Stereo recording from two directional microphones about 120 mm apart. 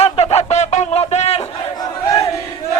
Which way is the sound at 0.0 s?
60° left (ahead or behind).